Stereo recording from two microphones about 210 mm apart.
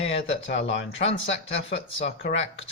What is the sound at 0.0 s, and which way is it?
Speech, 60° left (ahead or behind).